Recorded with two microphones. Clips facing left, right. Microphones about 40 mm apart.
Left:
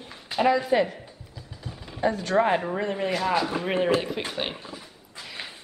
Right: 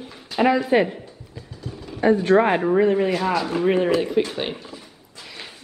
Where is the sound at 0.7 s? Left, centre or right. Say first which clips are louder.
Right 4 dB; right.